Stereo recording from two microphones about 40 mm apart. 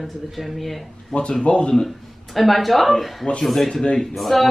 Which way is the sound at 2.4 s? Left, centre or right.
Centre.